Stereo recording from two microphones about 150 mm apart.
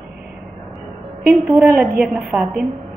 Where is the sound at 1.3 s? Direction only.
Centre (ahead or behind).